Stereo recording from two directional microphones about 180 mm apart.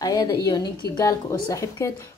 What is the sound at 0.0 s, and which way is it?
Speech, 20° left (ahead or behind).